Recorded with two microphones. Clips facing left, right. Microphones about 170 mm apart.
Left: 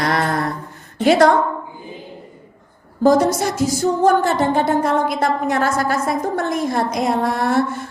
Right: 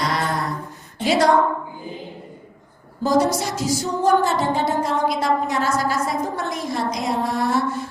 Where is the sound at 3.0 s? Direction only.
50° left (ahead or behind).